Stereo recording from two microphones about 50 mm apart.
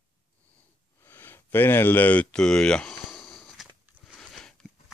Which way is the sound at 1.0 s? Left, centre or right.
Left.